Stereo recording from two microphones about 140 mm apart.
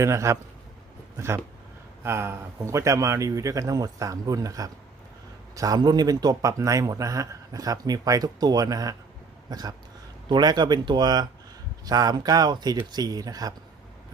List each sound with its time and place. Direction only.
0.0 s speech: 20° right (ahead or behind)
2.0 s speech: 20° right (ahead or behind)